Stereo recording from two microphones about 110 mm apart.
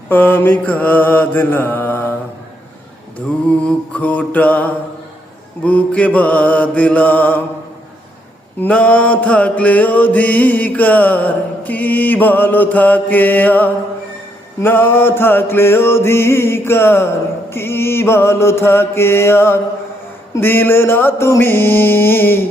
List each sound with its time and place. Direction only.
0.1 s mantra: 15° left (ahead or behind)
3.2 s mantra: 10° left (ahead or behind)
8.6 s mantra: 10° left (ahead or behind)